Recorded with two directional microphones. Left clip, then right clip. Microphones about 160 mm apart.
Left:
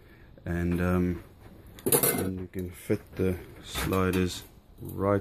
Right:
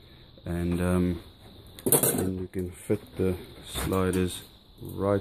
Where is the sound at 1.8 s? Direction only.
25° right (ahead or behind).